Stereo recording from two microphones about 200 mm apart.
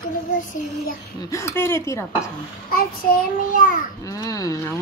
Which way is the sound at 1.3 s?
15° left (ahead or behind).